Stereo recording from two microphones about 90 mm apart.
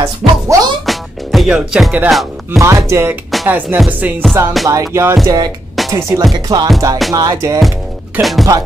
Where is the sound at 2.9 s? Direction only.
25° right (ahead or behind).